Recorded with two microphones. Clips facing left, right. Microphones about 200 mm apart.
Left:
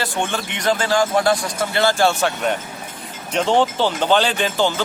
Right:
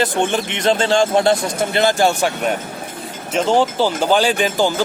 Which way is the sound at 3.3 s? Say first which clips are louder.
Right 2 dB; centre (ahead or behind).